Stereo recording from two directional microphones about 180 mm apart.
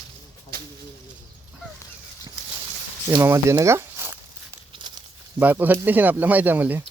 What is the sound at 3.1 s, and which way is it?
Speech, 15° right (ahead or behind).